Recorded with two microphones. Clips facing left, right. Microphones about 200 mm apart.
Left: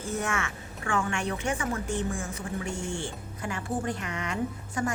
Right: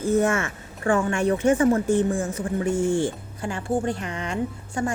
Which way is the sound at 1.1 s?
45° right (ahead or behind).